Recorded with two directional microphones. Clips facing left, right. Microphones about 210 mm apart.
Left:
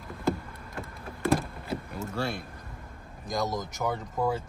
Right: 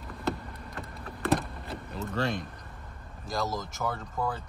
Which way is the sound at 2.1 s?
10° left (ahead or behind).